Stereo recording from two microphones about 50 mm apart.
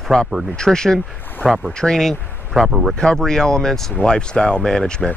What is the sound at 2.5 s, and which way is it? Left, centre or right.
Speech, centre.